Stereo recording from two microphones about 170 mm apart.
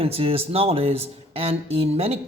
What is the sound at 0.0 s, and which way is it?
Speech, 35° right (ahead or behind).